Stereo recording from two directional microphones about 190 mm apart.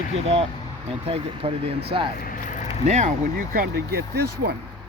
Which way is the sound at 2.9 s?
35° right (ahead or behind).